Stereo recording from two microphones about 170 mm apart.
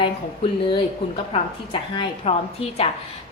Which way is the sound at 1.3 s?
35° left (ahead or behind).